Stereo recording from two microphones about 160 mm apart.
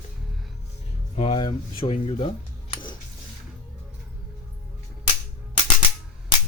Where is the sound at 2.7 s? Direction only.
30° left (ahead or behind).